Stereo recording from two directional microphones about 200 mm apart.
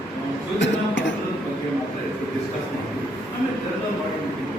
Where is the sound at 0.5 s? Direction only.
65° left (ahead or behind).